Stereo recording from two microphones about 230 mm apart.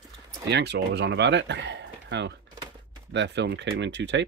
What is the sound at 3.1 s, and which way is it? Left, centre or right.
Speech, right.